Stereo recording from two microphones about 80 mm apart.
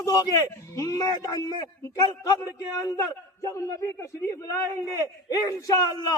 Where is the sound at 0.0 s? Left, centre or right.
Left.